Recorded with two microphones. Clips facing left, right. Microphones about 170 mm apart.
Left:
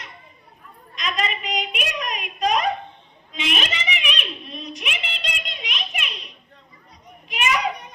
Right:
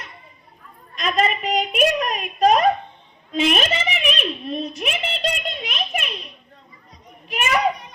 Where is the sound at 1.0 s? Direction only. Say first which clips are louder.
Right 6 dB; 50° right (ahead or behind).